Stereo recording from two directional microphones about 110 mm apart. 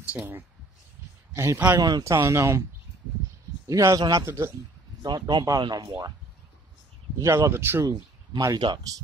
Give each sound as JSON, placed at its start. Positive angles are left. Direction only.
{"t": 0.0, "sound": "speech", "side_deg": -10}
{"t": 1.3, "sound": "speech", "side_deg": -25}
{"t": 1.8, "sound": "speech", "side_deg": -35}
{"t": 3.6, "sound": "speech", "side_deg": -30}
{"t": 4.3, "sound": "speech", "side_deg": -20}
{"t": 5.0, "sound": "speech", "side_deg": -40}
{"t": 7.2, "sound": "speech", "side_deg": -25}
{"t": 7.8, "sound": "speech", "side_deg": -35}